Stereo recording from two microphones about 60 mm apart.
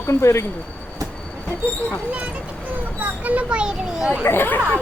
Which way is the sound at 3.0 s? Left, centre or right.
Right.